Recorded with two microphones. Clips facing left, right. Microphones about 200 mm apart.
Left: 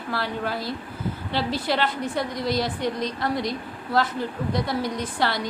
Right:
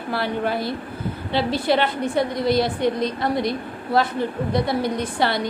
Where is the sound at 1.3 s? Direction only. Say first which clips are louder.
Right 6 dB; 60° right (ahead or behind).